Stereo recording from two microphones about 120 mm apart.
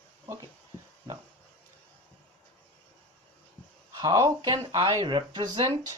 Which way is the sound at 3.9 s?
30° right (ahead or behind).